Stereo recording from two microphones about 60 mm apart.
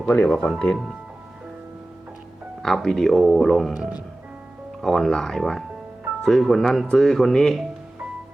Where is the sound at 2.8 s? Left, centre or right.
Centre.